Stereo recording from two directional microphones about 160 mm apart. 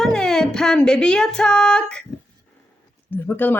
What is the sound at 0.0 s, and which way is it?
Music, 5° left (ahead or behind).